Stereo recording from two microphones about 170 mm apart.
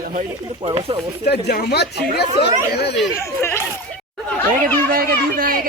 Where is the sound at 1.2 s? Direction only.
75° left (ahead or behind).